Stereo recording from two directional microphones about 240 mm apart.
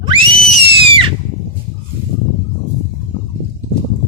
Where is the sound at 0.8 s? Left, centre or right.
Right.